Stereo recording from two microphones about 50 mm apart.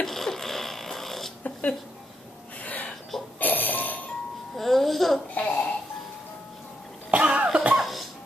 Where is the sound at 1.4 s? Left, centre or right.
Left.